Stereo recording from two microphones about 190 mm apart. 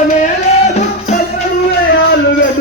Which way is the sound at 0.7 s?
35° left (ahead or behind).